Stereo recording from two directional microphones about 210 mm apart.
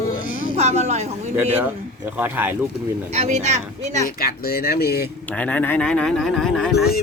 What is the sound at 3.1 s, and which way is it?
Speech, 30° right (ahead or behind).